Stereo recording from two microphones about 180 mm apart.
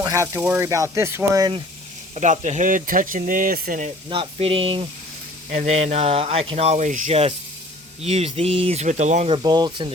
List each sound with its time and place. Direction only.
0.0 s speech: 15° right (ahead or behind)
2.1 s speech: 40° right (ahead or behind)
4.1 s speech: 30° right (ahead or behind)
9.3 s speech: 25° right (ahead or behind)